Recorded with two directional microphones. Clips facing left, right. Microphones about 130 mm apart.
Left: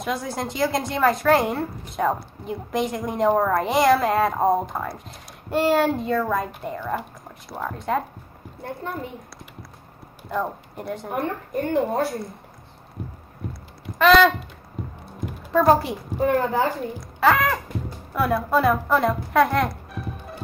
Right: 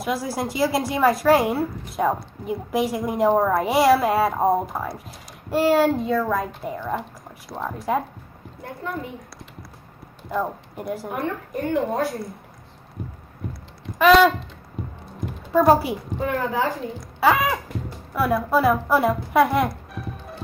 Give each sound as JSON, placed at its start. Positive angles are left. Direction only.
{"t": 0.0, "sound": "speech", "side_deg": -5}
{"t": 8.6, "sound": "speech", "side_deg": 30}
{"t": 10.3, "sound": "speech", "side_deg": -5}
{"t": 11.2, "sound": "a woman's voice", "side_deg": 35}
{"t": 13.9, "sound": "a sound", "side_deg": -5}
{"t": 14.8, "sound": "music", "side_deg": 0}
{"t": 15.5, "sound": "speech", "side_deg": -5}
{"t": 16.2, "sound": "speech", "side_deg": 35}
{"t": 17.2, "sound": "speech", "side_deg": -5}